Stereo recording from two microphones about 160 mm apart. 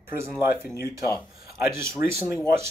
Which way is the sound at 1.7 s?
15° right (ahead or behind).